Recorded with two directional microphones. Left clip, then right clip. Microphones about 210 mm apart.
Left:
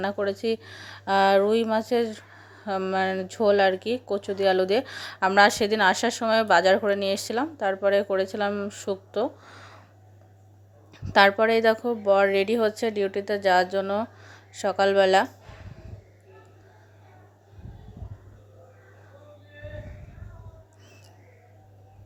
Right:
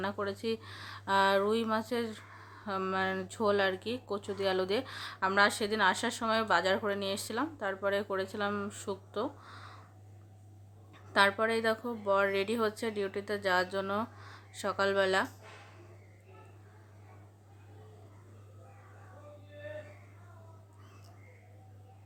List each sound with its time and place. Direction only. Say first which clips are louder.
0.0 s speech: left 9 dB; 20° left (ahead or behind)
10.9 s speech: left 9 dB; 30° left (ahead or behind)